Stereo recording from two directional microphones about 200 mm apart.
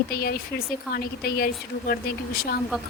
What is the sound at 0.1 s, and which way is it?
A woman's voice, 50° left (ahead or behind).